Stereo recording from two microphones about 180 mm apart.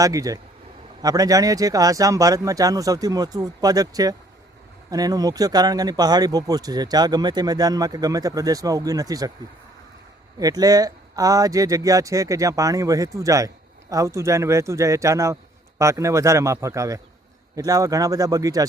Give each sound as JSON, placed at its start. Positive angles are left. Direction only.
{"t": 0.0, "sound": "speech", "side_deg": -20}
{"t": 10.4, "sound": "speech", "side_deg": -20}